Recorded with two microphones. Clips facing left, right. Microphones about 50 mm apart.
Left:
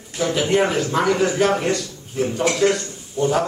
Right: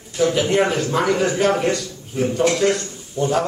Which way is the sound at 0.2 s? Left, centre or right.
Centre.